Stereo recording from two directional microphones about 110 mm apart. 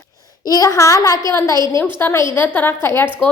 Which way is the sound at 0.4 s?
35° left (ahead or behind).